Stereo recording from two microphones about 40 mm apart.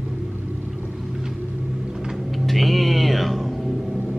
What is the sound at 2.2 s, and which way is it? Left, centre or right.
Music, centre.